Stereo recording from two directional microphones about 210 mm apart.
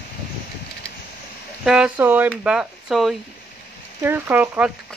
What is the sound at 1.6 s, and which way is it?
Speech, 5° right (ahead or behind).